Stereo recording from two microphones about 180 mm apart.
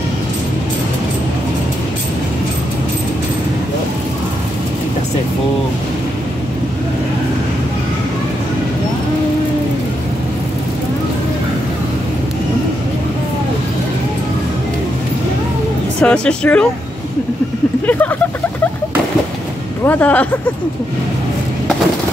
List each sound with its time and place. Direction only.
16.0 s a woman's voice: 5° left (ahead or behind)
17.8 s a woman's voice: 10° left (ahead or behind)
19.8 s a woman's voice: 10° left (ahead or behind)